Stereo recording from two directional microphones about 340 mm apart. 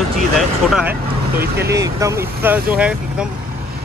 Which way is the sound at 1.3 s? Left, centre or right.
Right.